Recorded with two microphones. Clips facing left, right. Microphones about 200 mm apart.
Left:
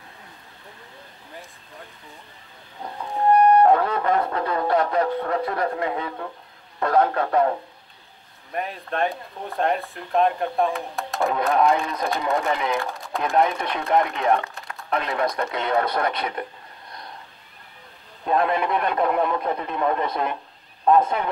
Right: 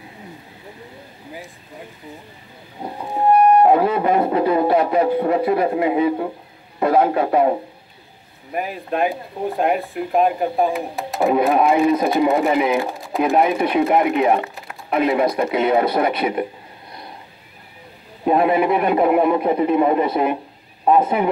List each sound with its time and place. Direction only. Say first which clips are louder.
2.8 s music: right 3 dB; 20° right (ahead or behind)
3.3 s speech: right 2 dB; 10° right (ahead or behind)
13.0 s speech: right 3 dB; 5° right (ahead or behind)
18.2 s speech: right 6 dB; 10° right (ahead or behind)